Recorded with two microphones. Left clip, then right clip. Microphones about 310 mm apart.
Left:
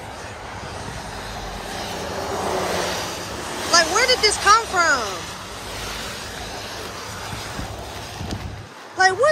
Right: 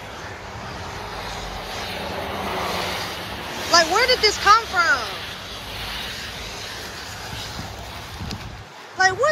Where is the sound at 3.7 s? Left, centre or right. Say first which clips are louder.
Even; centre.